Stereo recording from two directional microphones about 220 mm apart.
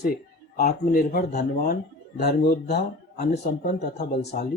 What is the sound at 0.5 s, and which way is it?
Speech, 40° left (ahead or behind).